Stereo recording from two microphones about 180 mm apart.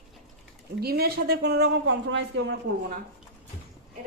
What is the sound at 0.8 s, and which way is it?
Speech, 60° right (ahead or behind).